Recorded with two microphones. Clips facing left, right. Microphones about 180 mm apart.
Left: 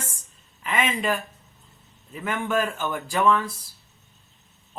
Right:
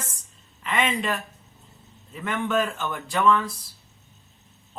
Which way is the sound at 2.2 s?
5° left (ahead or behind).